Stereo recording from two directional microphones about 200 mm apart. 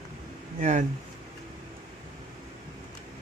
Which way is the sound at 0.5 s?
35° right (ahead or behind).